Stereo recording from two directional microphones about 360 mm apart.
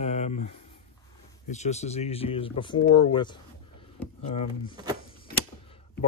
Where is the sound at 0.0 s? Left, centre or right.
Centre.